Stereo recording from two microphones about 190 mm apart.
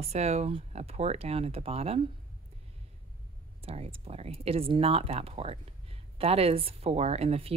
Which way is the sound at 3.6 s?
35° right (ahead or behind).